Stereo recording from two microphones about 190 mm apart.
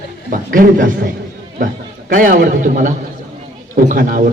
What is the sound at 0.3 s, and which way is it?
A man's voice, 45° right (ahead or behind).